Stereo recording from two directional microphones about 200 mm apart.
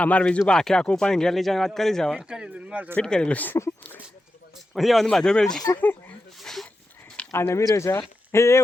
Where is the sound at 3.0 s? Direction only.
5° left (ahead or behind).